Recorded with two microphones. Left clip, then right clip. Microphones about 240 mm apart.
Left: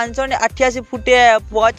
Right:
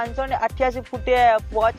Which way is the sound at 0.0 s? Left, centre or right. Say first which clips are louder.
Left 6 dB; left.